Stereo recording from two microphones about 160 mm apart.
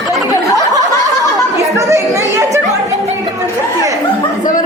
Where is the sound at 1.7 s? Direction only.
20° right (ahead or behind).